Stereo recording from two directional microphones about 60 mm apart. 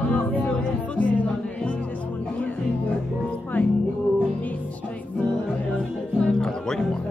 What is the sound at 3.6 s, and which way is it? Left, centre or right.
Music, left.